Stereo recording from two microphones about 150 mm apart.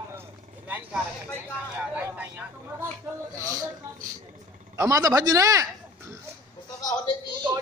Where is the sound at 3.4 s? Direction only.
20° right (ahead or behind).